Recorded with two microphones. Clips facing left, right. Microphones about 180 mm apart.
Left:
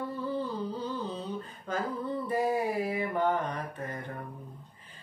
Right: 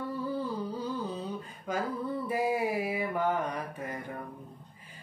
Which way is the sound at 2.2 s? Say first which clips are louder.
Left 1 dB; 10° right (ahead or behind).